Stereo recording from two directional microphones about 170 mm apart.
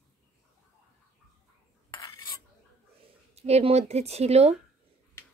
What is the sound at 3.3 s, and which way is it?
Speech, 40° right (ahead or behind).